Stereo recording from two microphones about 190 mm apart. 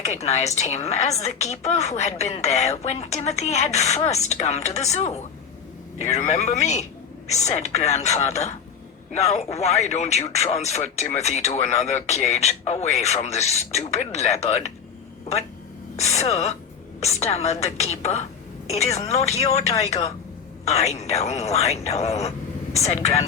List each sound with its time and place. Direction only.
0.1 s speech: 35° left (ahead or behind)
16.0 s speech: 35° left (ahead or behind)